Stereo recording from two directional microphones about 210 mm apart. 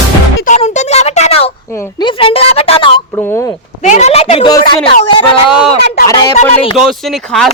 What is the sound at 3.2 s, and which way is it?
Speech, 10° left (ahead or behind).